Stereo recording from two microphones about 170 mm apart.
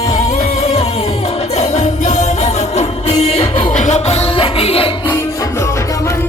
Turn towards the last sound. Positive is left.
turn(degrees=35)  # may be behind; listen again after turning